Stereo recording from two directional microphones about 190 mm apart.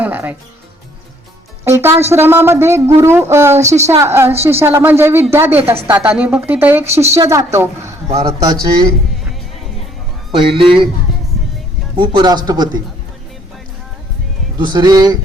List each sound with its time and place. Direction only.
0.0 s music: 10° right (ahead or behind)
1.6 s speech: 15° right (ahead or behind)
3.6 s a woman's voice: 35° right (ahead or behind)
3.8 s speech: 15° right (ahead or behind)
10.3 s speech: 25° right (ahead or behind)
11.9 s speech: 25° right (ahead or behind)
14.6 s speech: 25° right (ahead or behind)